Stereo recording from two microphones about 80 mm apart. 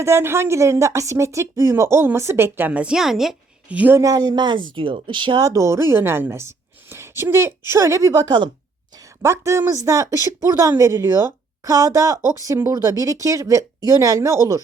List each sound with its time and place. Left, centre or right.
0.0 s a woman's voice: right; by 3.3 s centre
3.7 s a woman's voice: centre
4.0 s speech: right
5.4 s speech: right
9.2 s a woman's voice: right